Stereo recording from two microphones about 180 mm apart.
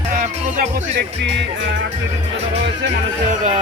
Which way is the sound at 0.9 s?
75° right (ahead or behind).